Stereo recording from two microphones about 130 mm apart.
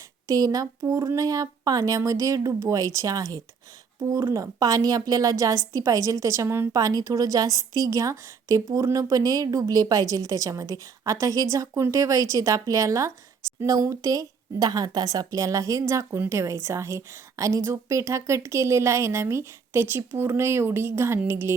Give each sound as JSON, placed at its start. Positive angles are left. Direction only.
{"t": 0.3, "sound": "a woman's voice", "side_deg": -30}